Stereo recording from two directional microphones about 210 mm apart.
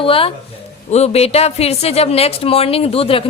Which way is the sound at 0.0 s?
25° left (ahead or behind).